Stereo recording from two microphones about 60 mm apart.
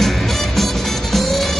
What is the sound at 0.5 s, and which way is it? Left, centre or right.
Music, centre.